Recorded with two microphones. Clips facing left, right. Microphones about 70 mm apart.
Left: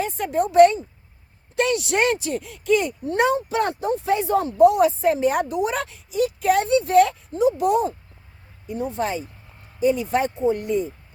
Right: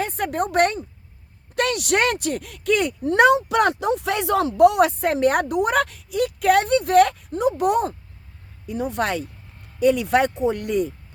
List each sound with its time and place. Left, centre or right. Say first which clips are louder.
0.0 s speech: left 1 dB; right
8.6 s speech: right 1 dB; right